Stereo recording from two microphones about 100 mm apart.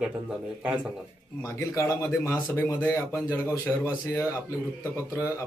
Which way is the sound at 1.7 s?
30° left (ahead or behind).